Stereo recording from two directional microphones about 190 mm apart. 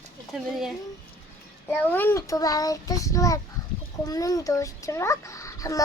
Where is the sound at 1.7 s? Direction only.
10° left (ahead or behind).